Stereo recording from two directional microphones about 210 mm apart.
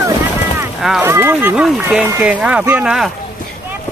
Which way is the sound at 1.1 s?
10° right (ahead or behind).